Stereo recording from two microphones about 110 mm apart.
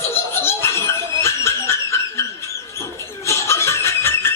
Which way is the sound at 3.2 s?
25° left (ahead or behind).